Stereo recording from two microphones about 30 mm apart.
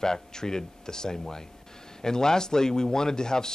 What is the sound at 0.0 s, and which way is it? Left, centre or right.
Speech, left.